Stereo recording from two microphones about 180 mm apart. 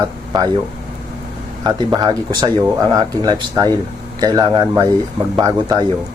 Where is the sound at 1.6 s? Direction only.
20° right (ahead or behind).